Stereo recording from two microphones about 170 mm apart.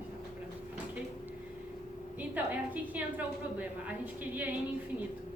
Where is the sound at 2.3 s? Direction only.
10° right (ahead or behind).